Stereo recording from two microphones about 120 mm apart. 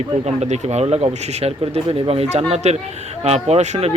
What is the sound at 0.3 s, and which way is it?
Speech, 70° right (ahead or behind).